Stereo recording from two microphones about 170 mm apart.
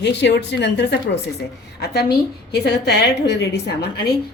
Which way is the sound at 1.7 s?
70° left (ahead or behind).